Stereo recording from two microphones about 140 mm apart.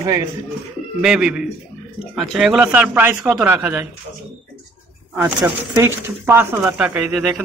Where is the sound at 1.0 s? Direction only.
5° right (ahead or behind).